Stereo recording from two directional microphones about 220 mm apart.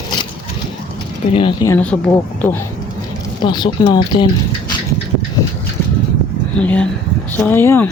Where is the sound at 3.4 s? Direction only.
20° left (ahead or behind).